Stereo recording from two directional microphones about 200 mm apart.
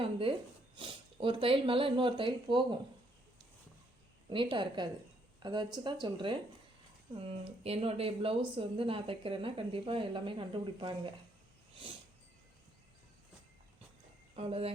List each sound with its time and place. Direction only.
0.0 s speech: 25° right (ahead or behind)
4.3 s speech: 25° right (ahead or behind)
14.3 s speech: 30° right (ahead or behind)